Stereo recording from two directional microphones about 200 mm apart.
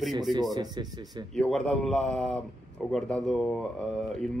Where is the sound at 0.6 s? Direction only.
20° right (ahead or behind).